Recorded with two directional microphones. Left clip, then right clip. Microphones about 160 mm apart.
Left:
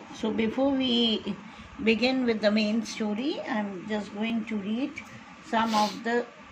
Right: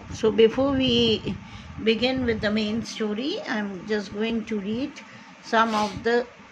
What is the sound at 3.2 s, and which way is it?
A woman's voice, 30° right (ahead or behind).